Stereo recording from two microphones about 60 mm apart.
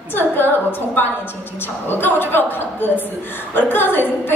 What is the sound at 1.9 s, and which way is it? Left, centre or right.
A woman's voice, left.